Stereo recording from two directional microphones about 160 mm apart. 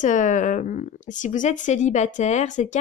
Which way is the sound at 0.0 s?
50° left (ahead or behind).